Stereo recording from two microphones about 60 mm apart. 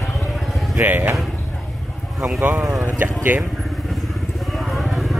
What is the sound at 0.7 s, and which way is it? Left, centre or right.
Speech, right.